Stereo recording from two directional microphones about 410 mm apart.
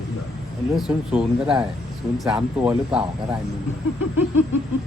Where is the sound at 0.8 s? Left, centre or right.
Centre.